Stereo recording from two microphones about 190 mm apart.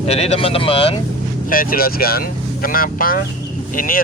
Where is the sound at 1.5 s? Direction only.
50° left (ahead or behind).